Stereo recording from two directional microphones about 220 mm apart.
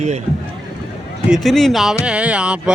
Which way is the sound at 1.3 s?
Centre (ahead or behind).